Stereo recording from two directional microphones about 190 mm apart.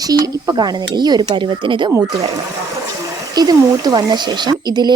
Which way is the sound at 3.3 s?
20° right (ahead or behind).